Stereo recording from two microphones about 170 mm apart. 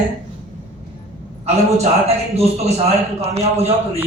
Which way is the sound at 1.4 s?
40° right (ahead or behind).